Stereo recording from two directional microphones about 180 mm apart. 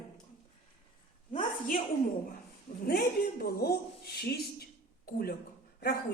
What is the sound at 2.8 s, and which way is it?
A woman's voice, 55° left (ahead or behind).